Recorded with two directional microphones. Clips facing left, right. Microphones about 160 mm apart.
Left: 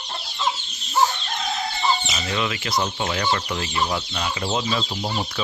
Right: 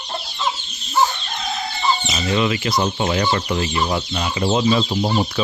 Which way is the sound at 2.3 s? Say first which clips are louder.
Right 6 dB; 15° right (ahead or behind).